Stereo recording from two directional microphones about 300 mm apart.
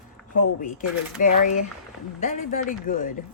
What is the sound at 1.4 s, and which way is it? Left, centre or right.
Speech, left.